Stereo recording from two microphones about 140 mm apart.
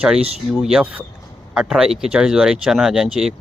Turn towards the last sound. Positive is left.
turn(degrees=0)  # may be behind; listen again after turning